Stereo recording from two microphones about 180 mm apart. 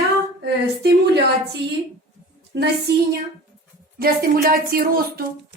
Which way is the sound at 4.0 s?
55° right (ahead or behind).